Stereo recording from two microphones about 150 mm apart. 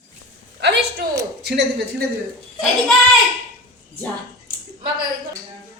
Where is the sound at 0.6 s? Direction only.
90° right.